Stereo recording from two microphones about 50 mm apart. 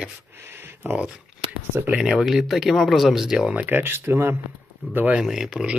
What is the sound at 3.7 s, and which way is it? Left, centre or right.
Speech, right.